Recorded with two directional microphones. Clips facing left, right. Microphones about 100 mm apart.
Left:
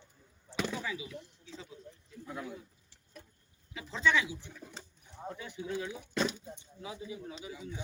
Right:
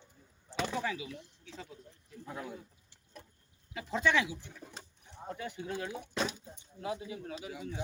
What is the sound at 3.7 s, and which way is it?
Speech, 50° right (ahead or behind).